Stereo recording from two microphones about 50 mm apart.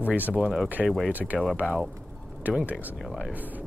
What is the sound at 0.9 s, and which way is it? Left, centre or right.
Speech, centre.